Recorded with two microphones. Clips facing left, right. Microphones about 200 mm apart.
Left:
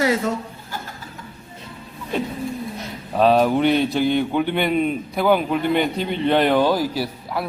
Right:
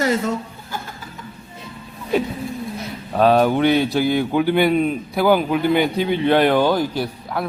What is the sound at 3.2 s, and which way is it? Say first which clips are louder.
A man's voice: right 1 dB; centre (ahead or behind).